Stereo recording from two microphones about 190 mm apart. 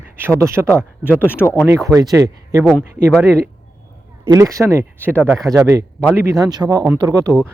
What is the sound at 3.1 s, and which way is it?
Speech, 5° left (ahead or behind).